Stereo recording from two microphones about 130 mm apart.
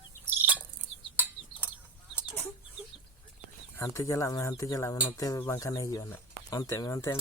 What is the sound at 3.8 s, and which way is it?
Speech, 25° left (ahead or behind).